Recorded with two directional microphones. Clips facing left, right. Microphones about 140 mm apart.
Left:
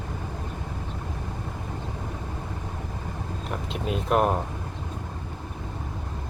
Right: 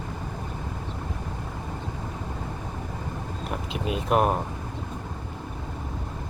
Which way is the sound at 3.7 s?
Centre (ahead or behind).